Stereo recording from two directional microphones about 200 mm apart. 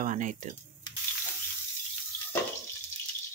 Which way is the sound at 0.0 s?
40° right (ahead or behind).